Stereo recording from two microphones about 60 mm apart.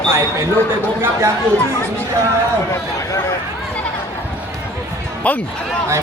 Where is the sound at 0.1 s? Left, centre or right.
Right.